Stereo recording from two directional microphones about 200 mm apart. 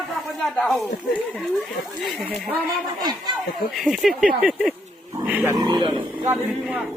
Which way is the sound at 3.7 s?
Centre (ahead or behind).